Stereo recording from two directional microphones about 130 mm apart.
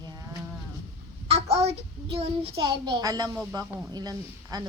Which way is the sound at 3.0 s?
25° right (ahead or behind).